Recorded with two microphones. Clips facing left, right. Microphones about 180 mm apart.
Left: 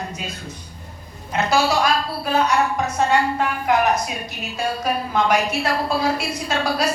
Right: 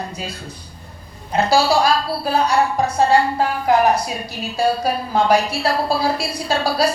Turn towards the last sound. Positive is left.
turn(degrees=-35)  # may be behind; listen again after turning